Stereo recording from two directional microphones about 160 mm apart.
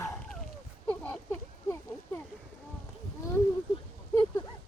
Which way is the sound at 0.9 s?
10° left (ahead or behind).